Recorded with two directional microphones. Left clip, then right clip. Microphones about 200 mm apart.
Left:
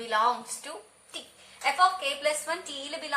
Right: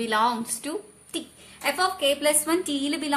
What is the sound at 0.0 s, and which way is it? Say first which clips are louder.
A woman's voice: right 2 dB; 40° right (ahead or behind).